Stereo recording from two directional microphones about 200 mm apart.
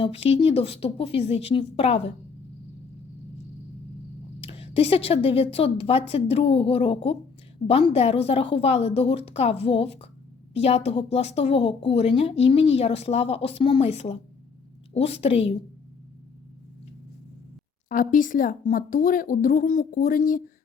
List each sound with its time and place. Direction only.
0.0 s a woman's voice: 30° left (ahead or behind)
4.4 s a woman's voice: 30° left (ahead or behind)
17.8 s speech: 45° left (ahead or behind)